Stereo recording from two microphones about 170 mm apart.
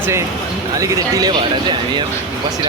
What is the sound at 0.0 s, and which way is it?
Speech, 15° right (ahead or behind).